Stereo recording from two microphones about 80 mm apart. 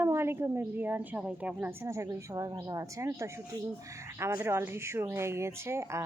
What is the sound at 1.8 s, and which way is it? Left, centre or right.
A woman's voice, right.